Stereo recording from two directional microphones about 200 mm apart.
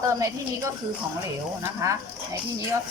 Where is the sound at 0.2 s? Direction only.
15° right (ahead or behind).